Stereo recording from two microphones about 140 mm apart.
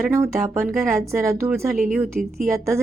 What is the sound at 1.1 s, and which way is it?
Speech, 20° right (ahead or behind).